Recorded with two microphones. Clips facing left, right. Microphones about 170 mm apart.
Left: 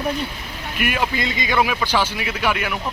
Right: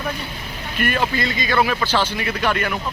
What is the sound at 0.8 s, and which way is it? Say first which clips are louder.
Speech: right 1 dB; 10° left (ahead or behind).